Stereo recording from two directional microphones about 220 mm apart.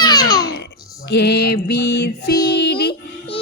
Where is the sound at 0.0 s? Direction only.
15° left (ahead or behind).